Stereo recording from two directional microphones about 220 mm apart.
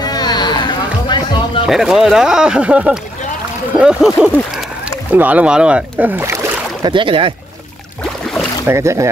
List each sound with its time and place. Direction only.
0.0 s a sound: 20° left (ahead or behind)
1.7 s speech: centre (ahead or behind); by 7.3 s 25° right (ahead or behind)
8.6 s speech: 15° right (ahead or behind)